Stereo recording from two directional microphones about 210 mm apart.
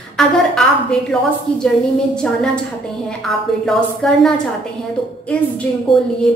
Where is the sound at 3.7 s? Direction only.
5° left (ahead or behind).